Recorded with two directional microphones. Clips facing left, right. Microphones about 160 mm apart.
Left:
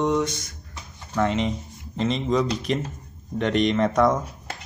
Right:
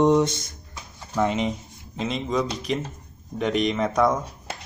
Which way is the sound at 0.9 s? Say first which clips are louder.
Even; 15° right (ahead or behind).